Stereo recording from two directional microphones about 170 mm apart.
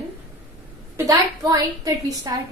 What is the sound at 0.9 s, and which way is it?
A woman's voice, 20° right (ahead or behind).